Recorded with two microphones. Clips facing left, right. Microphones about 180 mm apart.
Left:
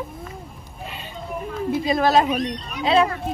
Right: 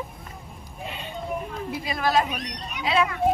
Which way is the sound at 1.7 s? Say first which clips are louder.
Left 6 dB; 25° left (ahead or behind).